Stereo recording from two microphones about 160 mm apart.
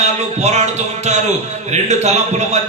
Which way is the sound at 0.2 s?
45° right (ahead or behind).